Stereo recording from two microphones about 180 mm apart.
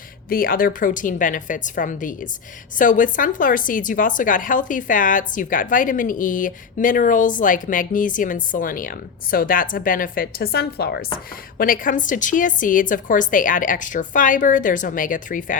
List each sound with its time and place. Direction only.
0.3 s a woman's voice: 55° left (ahead or behind)
11.5 s a woman's voice: 50° left (ahead or behind)